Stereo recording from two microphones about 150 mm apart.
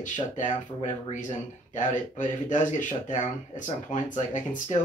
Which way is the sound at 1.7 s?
60° left (ahead or behind).